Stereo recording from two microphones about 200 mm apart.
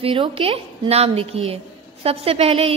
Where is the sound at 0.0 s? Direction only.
25° right (ahead or behind).